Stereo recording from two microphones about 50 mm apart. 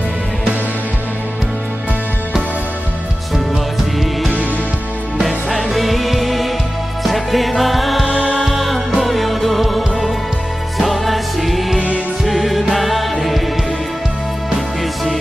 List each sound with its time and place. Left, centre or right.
5.7 s music: centre
8.1 s music: centre
8.5 s music: centre